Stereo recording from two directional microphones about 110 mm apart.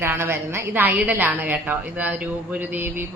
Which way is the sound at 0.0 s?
20° right (ahead or behind).